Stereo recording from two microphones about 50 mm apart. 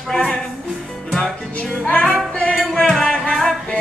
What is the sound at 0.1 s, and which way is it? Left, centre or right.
Music, centre.